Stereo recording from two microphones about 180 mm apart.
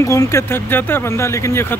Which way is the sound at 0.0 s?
15° left (ahead or behind).